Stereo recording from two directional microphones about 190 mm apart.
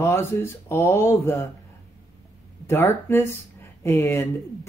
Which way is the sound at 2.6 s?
15° left (ahead or behind).